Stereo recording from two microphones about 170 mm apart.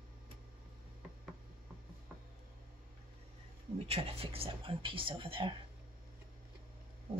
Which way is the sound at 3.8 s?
35° right (ahead or behind).